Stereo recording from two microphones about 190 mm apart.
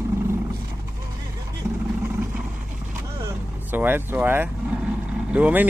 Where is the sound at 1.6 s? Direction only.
15° right (ahead or behind).